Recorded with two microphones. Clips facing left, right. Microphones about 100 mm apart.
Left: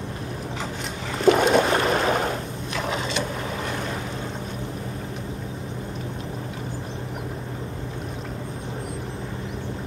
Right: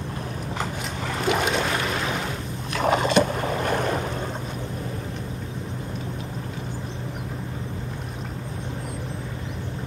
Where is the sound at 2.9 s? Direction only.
55° right (ahead or behind).